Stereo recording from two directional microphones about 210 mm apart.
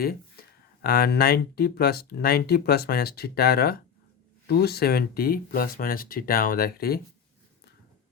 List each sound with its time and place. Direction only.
0.8 s speech: 45° left (ahead or behind)